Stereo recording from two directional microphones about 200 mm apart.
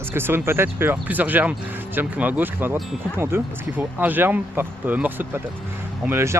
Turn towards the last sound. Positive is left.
turn(degrees=-10)  # may be behind; listen again after turning